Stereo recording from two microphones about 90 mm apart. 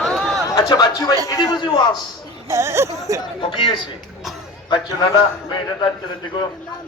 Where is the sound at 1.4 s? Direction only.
60° left (ahead or behind).